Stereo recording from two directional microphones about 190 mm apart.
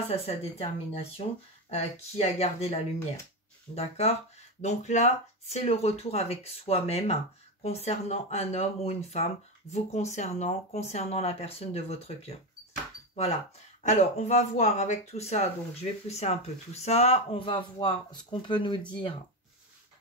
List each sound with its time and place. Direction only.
0.1 s speech: 35° left (ahead or behind)